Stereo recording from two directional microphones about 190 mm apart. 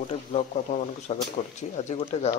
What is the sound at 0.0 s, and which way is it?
Speech, 40° left (ahead or behind).